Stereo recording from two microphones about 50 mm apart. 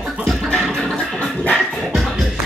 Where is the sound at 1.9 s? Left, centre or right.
Centre.